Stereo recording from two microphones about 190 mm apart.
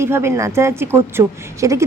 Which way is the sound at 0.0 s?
15° right (ahead or behind).